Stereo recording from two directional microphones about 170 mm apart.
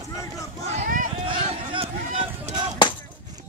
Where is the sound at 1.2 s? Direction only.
30° right (ahead or behind).